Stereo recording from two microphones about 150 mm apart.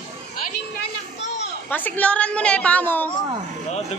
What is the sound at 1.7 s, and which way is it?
A woman's voice, 10° left (ahead or behind).